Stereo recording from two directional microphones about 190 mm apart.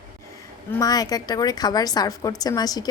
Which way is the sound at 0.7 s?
20° left (ahead or behind).